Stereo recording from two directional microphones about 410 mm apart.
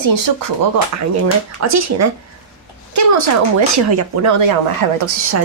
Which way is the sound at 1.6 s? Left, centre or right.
Right.